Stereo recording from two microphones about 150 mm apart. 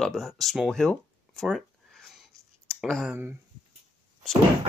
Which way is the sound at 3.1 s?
15° right (ahead or behind).